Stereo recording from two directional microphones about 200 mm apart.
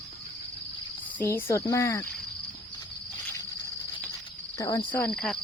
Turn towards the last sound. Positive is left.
turn(degrees=5)  # may be behind; listen again after turning